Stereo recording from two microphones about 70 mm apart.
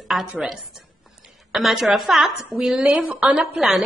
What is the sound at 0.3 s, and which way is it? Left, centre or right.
Speech, centre.